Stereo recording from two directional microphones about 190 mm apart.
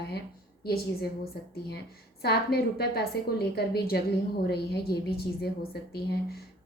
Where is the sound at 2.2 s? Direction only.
55° left (ahead or behind).